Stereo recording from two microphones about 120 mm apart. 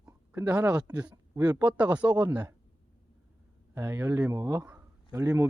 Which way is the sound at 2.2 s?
30° right (ahead or behind).